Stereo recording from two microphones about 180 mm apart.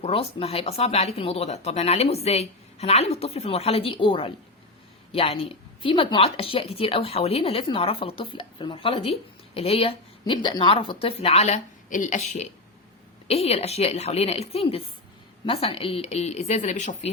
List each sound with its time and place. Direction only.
0.0 s a woman's voice: 30° left (ahead or behind)